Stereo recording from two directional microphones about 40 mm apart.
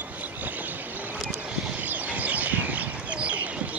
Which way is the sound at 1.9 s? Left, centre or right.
Right.